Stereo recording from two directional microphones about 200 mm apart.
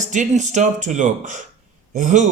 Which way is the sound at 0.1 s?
35° right (ahead or behind).